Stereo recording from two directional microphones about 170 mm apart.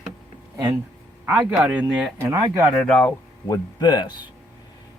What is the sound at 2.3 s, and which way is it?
Speech, 15° right (ahead or behind).